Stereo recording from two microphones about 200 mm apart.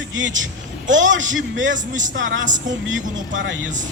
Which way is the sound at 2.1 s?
70° right (ahead or behind).